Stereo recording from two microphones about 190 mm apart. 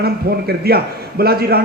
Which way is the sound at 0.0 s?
55° right (ahead or behind).